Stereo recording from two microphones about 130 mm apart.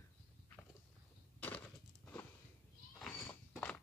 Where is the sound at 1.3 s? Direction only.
10° left (ahead or behind).